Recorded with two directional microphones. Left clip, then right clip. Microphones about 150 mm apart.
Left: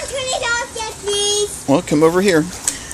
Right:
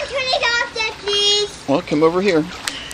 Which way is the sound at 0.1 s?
40° left (ahead or behind).